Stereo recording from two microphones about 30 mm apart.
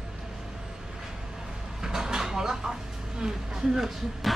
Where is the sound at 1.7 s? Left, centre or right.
Centre.